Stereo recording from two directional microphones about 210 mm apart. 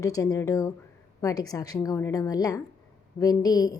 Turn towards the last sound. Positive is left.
turn(degrees=20)  # may be behind; listen again after turning